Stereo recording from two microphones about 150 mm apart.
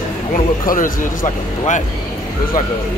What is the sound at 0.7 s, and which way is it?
A man's voice, 65° left (ahead or behind).